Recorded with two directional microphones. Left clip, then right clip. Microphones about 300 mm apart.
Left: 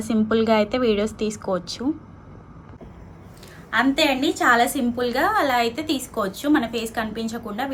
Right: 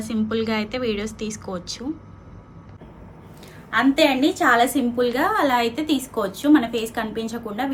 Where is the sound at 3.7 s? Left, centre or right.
Centre.